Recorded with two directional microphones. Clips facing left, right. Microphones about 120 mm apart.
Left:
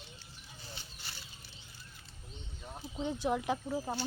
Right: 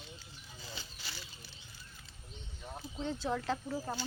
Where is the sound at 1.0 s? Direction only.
90° right.